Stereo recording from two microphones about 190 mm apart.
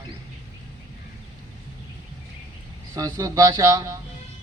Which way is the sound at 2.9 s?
20° right (ahead or behind).